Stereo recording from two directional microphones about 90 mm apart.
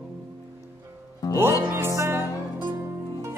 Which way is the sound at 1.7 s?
30° right (ahead or behind).